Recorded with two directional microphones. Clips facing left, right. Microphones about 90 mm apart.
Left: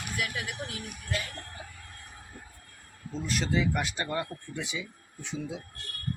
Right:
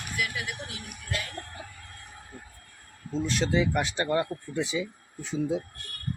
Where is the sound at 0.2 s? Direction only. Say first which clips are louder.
Right 2 dB; 45° left (ahead or behind).